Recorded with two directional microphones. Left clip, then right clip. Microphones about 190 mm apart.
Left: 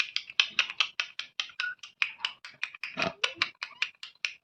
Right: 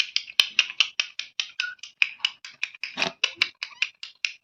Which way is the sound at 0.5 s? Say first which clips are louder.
Right 6 dB; 20° right (ahead or behind).